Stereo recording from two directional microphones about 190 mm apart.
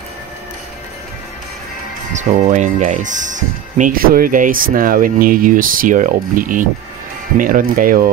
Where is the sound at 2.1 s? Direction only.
40° right (ahead or behind).